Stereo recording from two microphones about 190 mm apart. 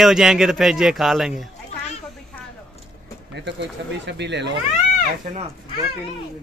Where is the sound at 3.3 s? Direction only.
65° right (ahead or behind).